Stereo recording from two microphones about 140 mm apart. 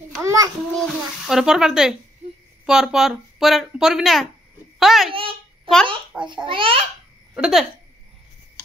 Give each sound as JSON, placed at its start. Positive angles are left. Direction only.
{"t": 0.2, "sound": "child singing", "side_deg": -25}
{"t": 0.7, "sound": "a woman's voice", "side_deg": 0}
{"t": 5.1, "sound": "speech", "side_deg": -40}
{"t": 7.3, "sound": "speech", "side_deg": -5}